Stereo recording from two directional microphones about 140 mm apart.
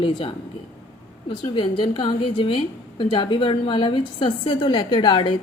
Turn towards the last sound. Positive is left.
turn(degrees=35)  # may be behind; listen again after turning